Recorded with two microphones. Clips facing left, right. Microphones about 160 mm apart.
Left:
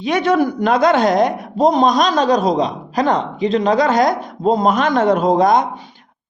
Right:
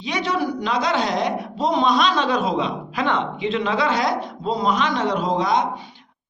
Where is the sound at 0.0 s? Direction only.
55° left (ahead or behind).